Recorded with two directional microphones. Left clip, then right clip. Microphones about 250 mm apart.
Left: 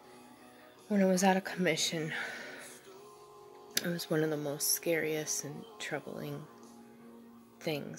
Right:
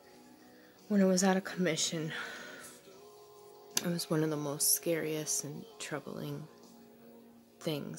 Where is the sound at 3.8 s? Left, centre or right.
Centre.